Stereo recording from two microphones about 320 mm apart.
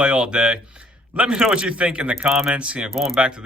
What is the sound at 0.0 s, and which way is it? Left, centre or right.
A man's voice, centre.